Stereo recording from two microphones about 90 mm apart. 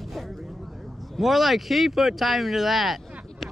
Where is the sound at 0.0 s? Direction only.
Centre (ahead or behind).